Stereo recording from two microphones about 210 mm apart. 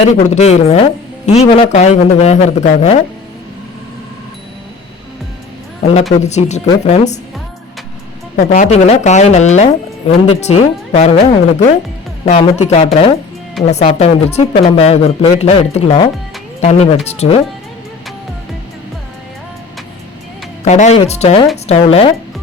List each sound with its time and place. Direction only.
0.0 s speech: 30° left (ahead or behind)
5.8 s speech: 30° left (ahead or behind)
8.4 s speech: 35° left (ahead or behind)
20.7 s speech: 35° left (ahead or behind)